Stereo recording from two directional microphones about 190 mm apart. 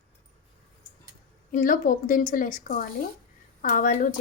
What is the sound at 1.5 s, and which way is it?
A woman's voice, 45° left (ahead or behind).